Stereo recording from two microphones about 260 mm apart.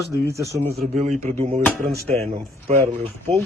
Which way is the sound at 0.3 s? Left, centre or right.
Centre.